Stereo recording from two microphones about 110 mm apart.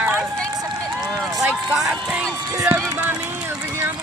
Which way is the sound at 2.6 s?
15° right (ahead or behind).